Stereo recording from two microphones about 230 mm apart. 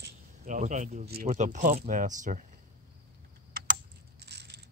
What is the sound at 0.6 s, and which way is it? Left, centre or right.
Speech, right.